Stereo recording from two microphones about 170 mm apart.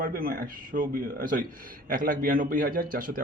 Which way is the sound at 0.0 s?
60° right (ahead or behind).